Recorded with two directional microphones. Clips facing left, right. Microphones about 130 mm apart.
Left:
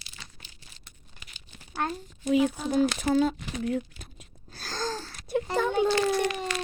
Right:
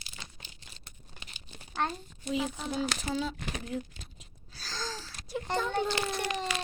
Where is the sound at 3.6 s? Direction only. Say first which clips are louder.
Left 7 dB; 55° left (ahead or behind).